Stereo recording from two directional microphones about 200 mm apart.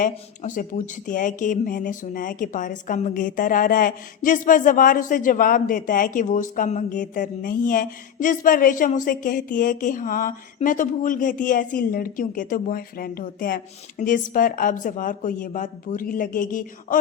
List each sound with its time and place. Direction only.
0.0 s speech: 40° left (ahead or behind)